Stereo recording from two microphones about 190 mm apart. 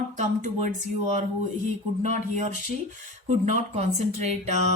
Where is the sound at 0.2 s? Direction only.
40° right (ahead or behind).